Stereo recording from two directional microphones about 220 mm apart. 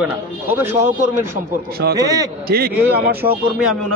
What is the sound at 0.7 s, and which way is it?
Speech, 35° right (ahead or behind).